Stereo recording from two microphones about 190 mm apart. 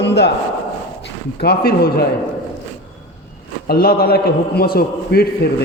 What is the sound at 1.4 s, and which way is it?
Speech, 55° left (ahead or behind).